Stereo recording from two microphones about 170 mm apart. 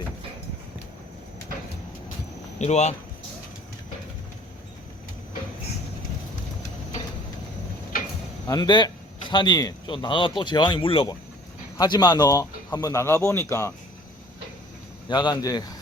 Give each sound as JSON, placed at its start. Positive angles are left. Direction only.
{"t": 2.6, "sound": "speech", "side_deg": 40}
{"t": 7.9, "sound": "a sound", "side_deg": 55}
{"t": 8.4, "sound": "speech", "side_deg": 25}
{"t": 15.1, "sound": "speech", "side_deg": 25}